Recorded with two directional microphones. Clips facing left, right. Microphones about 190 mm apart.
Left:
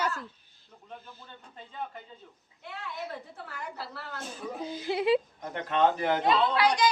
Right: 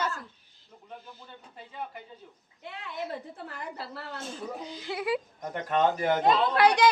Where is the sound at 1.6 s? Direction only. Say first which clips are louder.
Even; 10° right (ahead or behind).